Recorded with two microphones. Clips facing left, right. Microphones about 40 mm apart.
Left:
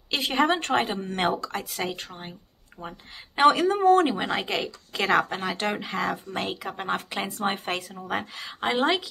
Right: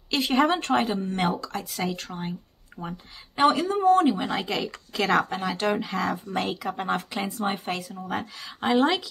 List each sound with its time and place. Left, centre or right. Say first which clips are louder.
0.1 s a sound: right 3 dB; centre
0.6 s a woman's voice: right 1 dB; left
1.6 s speech: right 1 dB; left
2.0 s speech: right 4 dB; centre
2.8 s speech: right 2 dB; left
3.3 s a woman's voice: left 2 dB; left
4.3 s speech: even; left
7.2 s a woman's voice: left 2 dB; left
8.5 s speech: right 2 dB; centre